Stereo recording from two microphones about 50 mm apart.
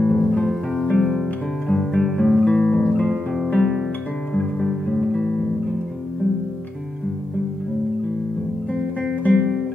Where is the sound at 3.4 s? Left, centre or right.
Left.